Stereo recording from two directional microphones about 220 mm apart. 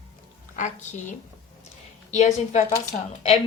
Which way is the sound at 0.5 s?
35° left (ahead or behind).